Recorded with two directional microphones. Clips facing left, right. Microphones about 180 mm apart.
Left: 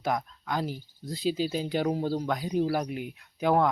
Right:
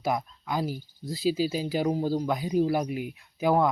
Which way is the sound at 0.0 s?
5° right (ahead or behind).